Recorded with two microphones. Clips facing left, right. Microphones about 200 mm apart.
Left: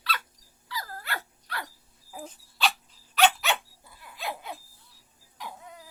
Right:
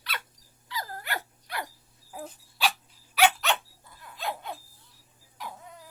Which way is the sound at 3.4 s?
10° left (ahead or behind).